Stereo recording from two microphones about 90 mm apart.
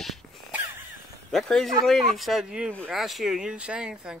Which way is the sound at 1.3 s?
5° left (ahead or behind).